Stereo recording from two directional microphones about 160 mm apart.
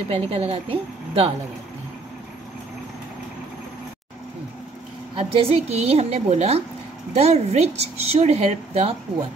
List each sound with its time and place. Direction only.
0.1 s a woman's voice: 40° right (ahead or behind)
5.1 s a woman's voice: 35° right (ahead or behind)